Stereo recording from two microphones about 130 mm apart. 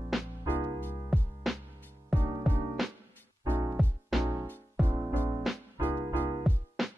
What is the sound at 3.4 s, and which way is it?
Music, 15° right (ahead or behind).